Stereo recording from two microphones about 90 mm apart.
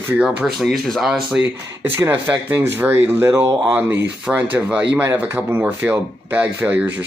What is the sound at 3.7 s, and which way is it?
Speech, 20° right (ahead or behind).